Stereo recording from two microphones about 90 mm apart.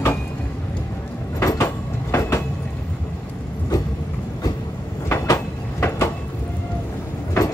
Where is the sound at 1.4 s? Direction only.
35° left (ahead or behind).